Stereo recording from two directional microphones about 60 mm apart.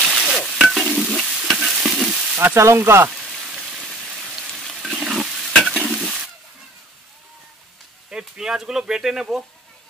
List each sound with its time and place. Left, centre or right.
0.0 s stir: centre
2.5 s speech: right
3.1 s rain on surface: centre
4.9 s stir: centre
5.9 s toilet flush: centre
8.1 s speech: centre